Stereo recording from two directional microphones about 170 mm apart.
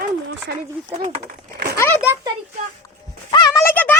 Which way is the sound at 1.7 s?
15° left (ahead or behind).